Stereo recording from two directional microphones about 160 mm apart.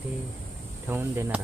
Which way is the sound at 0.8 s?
15° right (ahead or behind).